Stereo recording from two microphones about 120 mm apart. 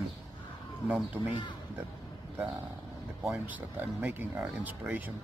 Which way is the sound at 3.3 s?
15° right (ahead or behind).